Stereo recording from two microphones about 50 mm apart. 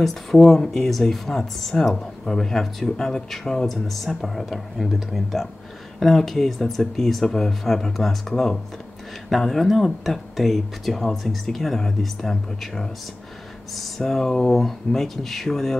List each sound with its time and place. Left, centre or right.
0.0 s speech: centre